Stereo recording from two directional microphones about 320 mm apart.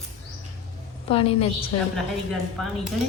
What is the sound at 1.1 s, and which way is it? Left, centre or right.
Speech, centre.